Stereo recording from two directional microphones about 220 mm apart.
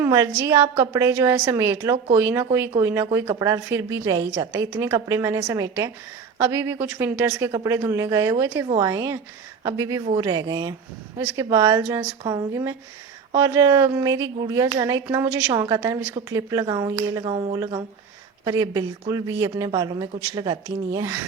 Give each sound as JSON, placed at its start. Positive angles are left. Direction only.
{"t": 0.0, "sound": "speech", "side_deg": -15}